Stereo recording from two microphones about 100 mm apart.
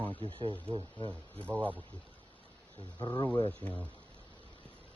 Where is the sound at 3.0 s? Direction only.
50° left (ahead or behind).